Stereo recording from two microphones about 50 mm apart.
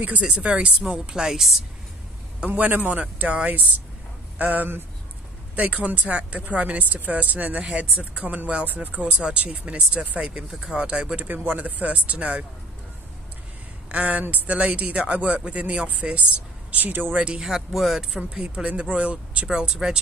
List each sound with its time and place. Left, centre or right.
0.2 s speech: right
0.9 s speech: centre
2.4 s a man's voice: right
5.6 s speech: right
11.1 s speech: right
13.8 s speech: right
16.7 s a man's voice: right
17.1 s speech: right
17.4 s speech: centre
17.7 s speech: centre
18.1 s speech: centre
19.4 s speech: centre